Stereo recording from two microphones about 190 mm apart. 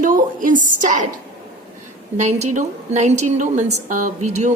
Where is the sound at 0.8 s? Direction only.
40° right (ahead or behind).